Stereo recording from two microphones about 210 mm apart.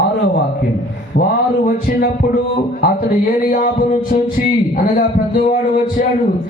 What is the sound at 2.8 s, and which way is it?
Music, 40° left (ahead or behind).